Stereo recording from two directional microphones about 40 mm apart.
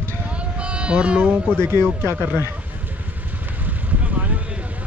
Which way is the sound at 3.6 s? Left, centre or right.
Right.